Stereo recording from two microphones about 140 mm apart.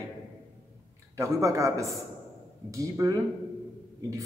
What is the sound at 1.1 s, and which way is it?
Speech, 20° right (ahead or behind).